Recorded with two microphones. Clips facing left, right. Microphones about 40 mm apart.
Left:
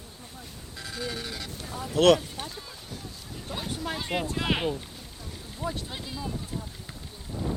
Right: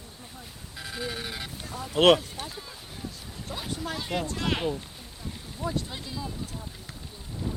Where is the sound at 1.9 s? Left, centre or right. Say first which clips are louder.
Even; right.